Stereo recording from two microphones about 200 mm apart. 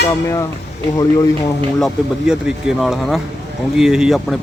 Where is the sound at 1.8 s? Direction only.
Centre (ahead or behind).